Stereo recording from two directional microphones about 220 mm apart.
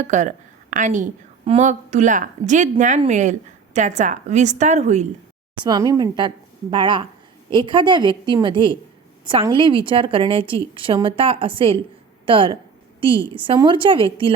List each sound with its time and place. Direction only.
0.0 s a woman's voice: 35° right (ahead or behind)
5.6 s a woman's voice: 15° right (ahead or behind)